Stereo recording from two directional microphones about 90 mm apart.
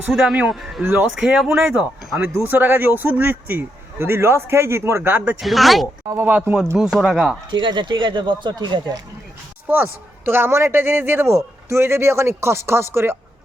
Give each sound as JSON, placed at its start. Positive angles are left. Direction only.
{"t": 0.1, "sound": "speech", "side_deg": -5}
{"t": 0.8, "sound": "speech", "side_deg": -20}
{"t": 1.2, "sound": "speech", "side_deg": -5}
{"t": 1.5, "sound": "speech", "side_deg": -25}
{"t": 5.4, "sound": "speech", "side_deg": 0}
{"t": 6.2, "sound": "speech", "side_deg": -20}
{"t": 6.7, "sound": "speech", "side_deg": -5}
{"t": 7.5, "sound": "speech", "side_deg": -60}
{"t": 9.6, "sound": "speech", "side_deg": -20}